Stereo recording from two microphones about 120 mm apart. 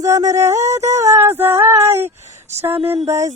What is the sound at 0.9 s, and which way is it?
Speech, 25° right (ahead or behind).